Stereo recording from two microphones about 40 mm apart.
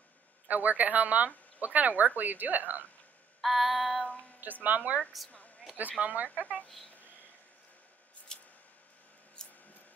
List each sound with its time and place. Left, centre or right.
0.5 s speech: right
3.3 s child singing: centre
4.4 s speech: right
8.3 s a sound: centre